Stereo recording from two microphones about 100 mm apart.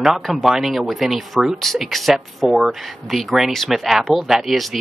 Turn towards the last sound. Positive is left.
turn(degrees=0)  # may be behind; listen again after turning